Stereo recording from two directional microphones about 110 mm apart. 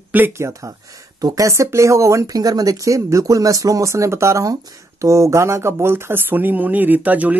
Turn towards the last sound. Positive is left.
turn(degrees=-15)  # may be behind; listen again after turning